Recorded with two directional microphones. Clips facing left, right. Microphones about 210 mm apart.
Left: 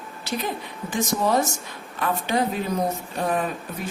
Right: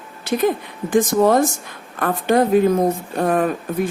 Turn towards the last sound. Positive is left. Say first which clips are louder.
# right 8 dB
turn(degrees=-50)  # may be behind; listen again after turning